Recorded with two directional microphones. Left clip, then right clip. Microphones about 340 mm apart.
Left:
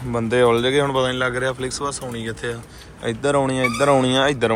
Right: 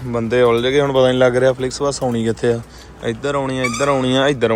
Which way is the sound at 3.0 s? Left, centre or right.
Centre.